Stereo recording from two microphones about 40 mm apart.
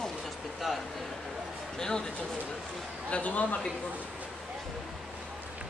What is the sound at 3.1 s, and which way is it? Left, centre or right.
Speech, left.